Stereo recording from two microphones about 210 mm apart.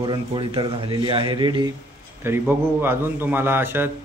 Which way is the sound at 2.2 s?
10° right (ahead or behind).